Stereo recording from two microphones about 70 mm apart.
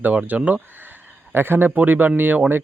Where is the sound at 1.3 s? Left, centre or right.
Right.